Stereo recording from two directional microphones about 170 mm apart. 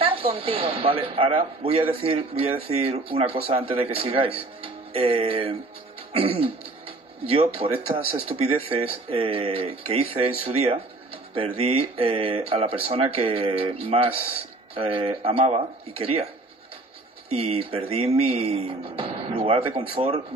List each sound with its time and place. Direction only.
0.0 s a man's voice: 30° right (ahead or behind)
17.3 s a man's voice: 35° right (ahead or behind)